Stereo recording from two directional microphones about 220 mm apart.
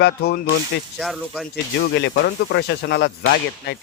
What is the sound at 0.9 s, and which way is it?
Speech, centre (ahead or behind).